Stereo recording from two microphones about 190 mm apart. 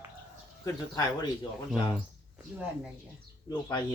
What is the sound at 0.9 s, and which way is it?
Speech, 20° left (ahead or behind).